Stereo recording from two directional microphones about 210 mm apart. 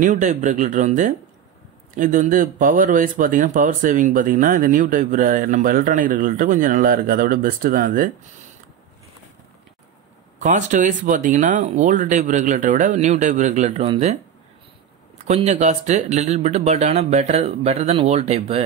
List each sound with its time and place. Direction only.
0.0 s speech: 35° right (ahead or behind)
10.4 s speech: 35° right (ahead or behind)
15.2 s speech: 30° right (ahead or behind)